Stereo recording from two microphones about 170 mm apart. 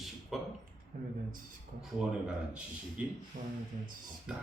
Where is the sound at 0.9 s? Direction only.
60° right (ahead or behind).